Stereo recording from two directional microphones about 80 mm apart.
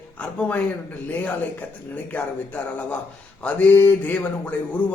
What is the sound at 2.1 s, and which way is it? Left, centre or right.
Speech, centre.